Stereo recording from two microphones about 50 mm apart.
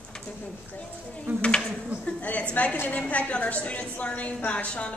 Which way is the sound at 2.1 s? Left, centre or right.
Left.